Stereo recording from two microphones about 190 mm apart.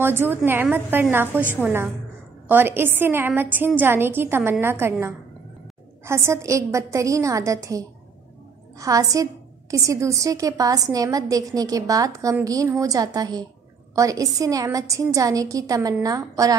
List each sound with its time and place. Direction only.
0.0 s a woman's voice: 10° right (ahead or behind)